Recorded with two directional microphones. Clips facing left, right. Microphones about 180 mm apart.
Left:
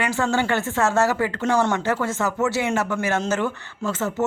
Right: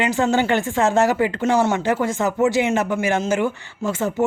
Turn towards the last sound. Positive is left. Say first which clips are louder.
# right 3 dB
turn(degrees=-15)  # may be behind; listen again after turning